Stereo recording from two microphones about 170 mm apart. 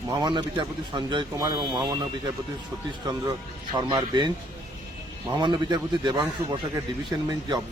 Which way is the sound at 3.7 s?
25° right (ahead or behind).